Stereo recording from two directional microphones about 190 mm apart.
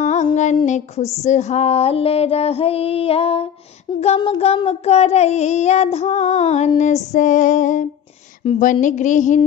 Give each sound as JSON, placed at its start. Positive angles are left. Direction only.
{"t": 0.0, "sound": "music", "side_deg": 40}